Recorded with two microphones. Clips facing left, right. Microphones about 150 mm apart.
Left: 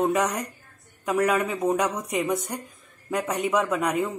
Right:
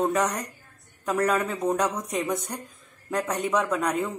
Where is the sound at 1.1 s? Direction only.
10° left (ahead or behind).